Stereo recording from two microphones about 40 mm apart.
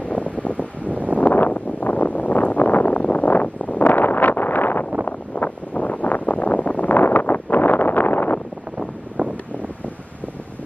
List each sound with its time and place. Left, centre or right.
0.1 s wind: left
0.6 s wind: right
1.1 s a sound: left
5.0 s wind noise: left